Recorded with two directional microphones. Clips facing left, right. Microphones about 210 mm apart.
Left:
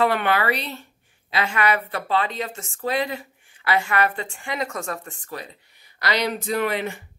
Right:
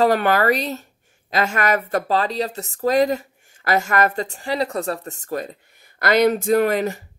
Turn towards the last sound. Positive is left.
turn(degrees=-40)  # may be behind; listen again after turning